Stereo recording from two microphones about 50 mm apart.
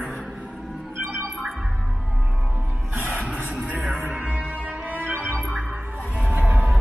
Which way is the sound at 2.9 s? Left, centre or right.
Right.